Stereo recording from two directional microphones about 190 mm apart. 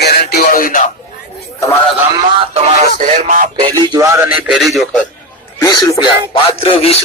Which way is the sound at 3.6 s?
25° right (ahead or behind).